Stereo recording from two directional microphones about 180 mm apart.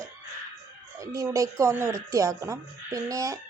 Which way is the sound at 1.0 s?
20° right (ahead or behind).